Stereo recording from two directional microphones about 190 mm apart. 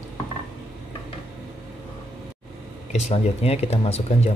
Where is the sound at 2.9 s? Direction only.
35° left (ahead or behind).